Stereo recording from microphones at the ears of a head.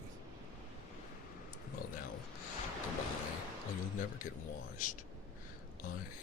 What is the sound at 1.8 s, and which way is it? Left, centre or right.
Speech, left.